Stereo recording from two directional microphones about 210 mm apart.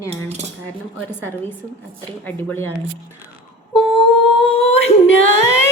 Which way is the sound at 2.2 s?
10° left (ahead or behind).